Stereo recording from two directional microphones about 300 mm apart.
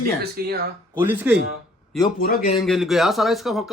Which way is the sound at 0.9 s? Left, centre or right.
Centre.